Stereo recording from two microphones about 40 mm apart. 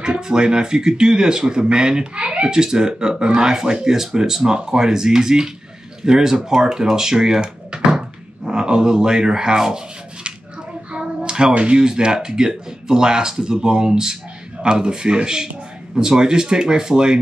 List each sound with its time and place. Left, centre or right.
0.0 s speech: centre
10.9 s hands: right
11.5 s speech: right